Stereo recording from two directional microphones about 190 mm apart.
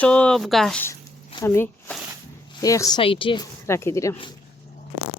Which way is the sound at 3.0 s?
25° left (ahead or behind).